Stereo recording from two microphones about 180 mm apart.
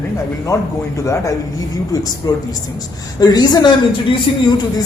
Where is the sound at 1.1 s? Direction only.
15° left (ahead or behind).